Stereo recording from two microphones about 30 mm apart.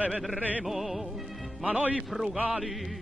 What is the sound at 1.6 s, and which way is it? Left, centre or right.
Speech, right.